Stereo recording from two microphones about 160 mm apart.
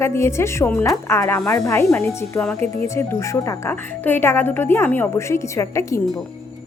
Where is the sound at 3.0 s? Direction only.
20° left (ahead or behind).